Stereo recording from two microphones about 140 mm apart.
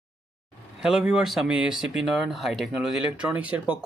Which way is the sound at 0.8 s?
5° right (ahead or behind).